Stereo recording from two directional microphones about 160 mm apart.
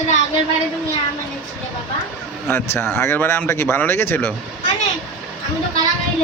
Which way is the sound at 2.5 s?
15° left (ahead or behind).